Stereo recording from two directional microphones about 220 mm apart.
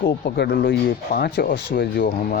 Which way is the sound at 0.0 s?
45° left (ahead or behind).